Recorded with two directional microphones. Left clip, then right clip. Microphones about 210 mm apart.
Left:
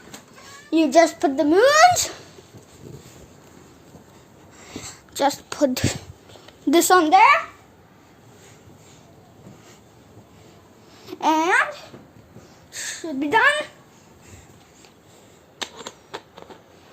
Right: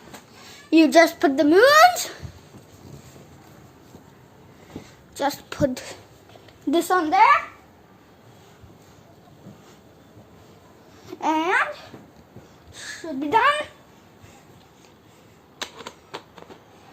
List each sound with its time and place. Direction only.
0.7 s a child's voice: 10° right (ahead or behind)
1.9 s a child's voice: 20° left (ahead or behind)
5.3 s a woman's voice: 10° left (ahead or behind)
5.7 s speech: 40° left (ahead or behind)
11.0 s babbling: 20° left (ahead or behind)
12.7 s a sound: 30° left (ahead or behind)
13.3 s a woman's voice: 10° left (ahead or behind)
15.6 s shuffling cards: 10° left (ahead or behind)